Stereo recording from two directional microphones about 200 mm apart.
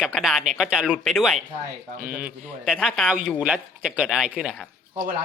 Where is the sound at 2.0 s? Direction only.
45° right (ahead or behind).